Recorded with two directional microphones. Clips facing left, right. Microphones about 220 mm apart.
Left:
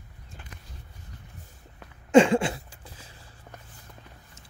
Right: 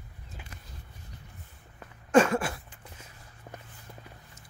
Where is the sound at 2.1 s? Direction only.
25° left (ahead or behind).